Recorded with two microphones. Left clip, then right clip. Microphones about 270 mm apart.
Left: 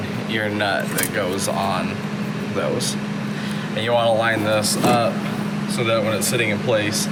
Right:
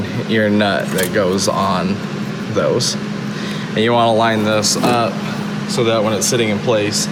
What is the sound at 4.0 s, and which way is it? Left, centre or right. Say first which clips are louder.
Speech: right 3 dB; centre.